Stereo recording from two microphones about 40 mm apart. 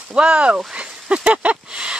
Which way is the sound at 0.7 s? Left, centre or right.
Right.